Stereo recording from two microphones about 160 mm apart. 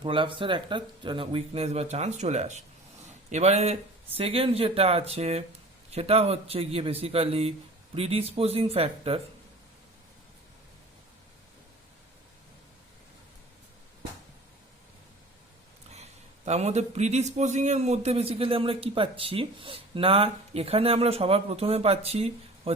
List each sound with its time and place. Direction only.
0.0 s a man's voice: 30° right (ahead or behind)
16.5 s a man's voice: 45° right (ahead or behind)